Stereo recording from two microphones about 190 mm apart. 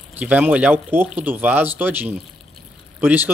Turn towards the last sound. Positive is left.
turn(degrees=-10)  # may be behind; listen again after turning